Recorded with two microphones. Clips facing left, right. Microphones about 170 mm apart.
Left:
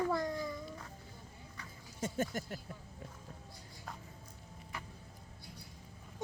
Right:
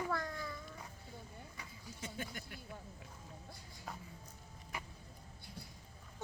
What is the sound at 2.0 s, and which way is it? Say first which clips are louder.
Speech: left 10 dB; 45° left (ahead or behind).